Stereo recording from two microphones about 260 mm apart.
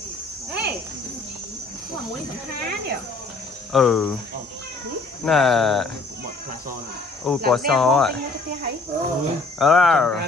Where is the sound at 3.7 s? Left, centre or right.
Centre.